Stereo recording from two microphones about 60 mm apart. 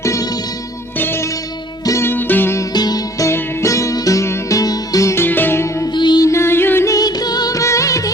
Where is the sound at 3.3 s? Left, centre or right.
Left.